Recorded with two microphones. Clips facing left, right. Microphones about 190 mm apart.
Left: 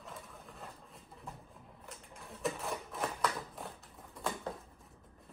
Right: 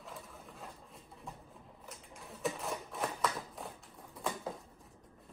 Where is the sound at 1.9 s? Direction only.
Centre (ahead or behind).